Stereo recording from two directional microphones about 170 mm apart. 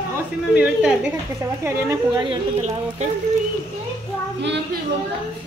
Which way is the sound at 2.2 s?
40° right (ahead or behind).